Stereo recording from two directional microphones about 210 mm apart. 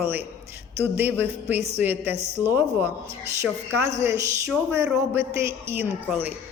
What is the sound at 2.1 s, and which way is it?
Speech, 30° right (ahead or behind).